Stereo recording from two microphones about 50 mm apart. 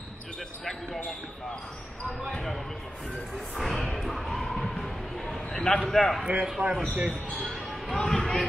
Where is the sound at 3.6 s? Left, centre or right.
Centre.